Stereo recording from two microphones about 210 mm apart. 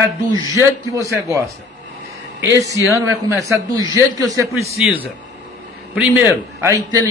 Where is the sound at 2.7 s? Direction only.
15° left (ahead or behind).